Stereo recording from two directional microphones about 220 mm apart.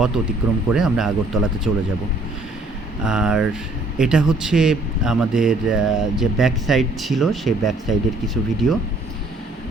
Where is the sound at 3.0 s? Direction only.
5° right (ahead or behind).